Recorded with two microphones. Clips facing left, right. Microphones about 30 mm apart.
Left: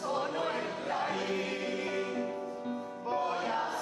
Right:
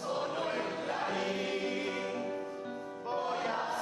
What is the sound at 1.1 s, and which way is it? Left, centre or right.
Music, centre.